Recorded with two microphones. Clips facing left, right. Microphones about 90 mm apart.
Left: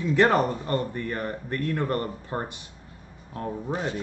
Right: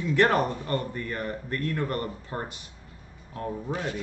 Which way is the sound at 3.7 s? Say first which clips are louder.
Left 3 dB; 30° left (ahead or behind).